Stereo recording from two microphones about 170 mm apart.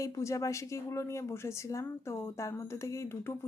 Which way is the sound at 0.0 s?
20° left (ahead or behind).